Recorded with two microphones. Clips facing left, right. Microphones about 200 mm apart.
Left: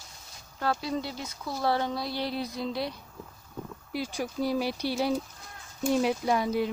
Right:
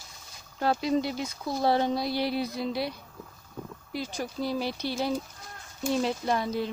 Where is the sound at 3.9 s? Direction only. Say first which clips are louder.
Left 1 dB; 10° left (ahead or behind).